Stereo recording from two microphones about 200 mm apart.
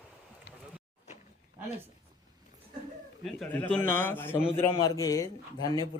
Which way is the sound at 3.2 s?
5° left (ahead or behind).